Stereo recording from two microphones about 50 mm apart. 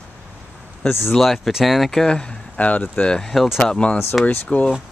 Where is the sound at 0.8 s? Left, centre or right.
Left.